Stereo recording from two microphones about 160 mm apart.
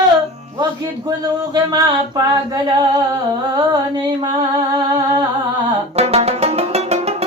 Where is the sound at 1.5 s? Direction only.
25° right (ahead or behind).